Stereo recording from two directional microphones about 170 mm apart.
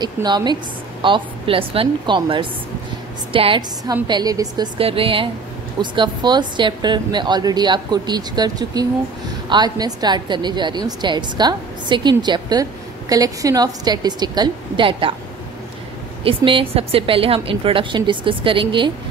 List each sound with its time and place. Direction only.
0.0 s a woman's voice: 25° right (ahead or behind)
4.7 s a woman's voice: 35° right (ahead or behind)
16.3 s a woman's voice: 30° right (ahead or behind)